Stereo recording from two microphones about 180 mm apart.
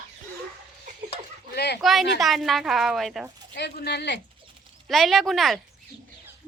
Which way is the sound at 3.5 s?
65° left (ahead or behind).